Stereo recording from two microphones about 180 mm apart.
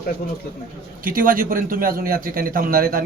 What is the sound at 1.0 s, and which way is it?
A man's voice, 50° right (ahead or behind).